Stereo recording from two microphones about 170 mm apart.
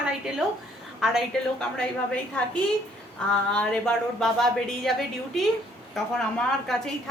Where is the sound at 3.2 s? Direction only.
5° left (ahead or behind).